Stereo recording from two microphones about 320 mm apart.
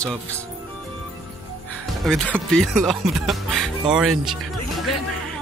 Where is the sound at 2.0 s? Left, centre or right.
Centre.